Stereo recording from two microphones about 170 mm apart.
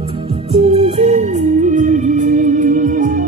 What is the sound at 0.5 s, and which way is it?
Music, 40° right (ahead or behind).